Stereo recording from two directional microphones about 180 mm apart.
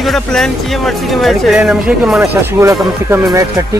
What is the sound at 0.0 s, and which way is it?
Speech, centre (ahead or behind).